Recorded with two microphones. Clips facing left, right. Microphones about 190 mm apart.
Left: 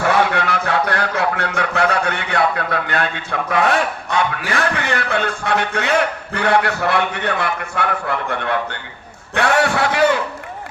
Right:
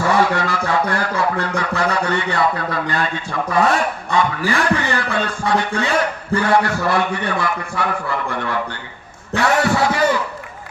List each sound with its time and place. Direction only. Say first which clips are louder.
0.0 s music: even; 65° left (ahead or behind)
3.5 s a man's voice: even; 65° left (ahead or behind)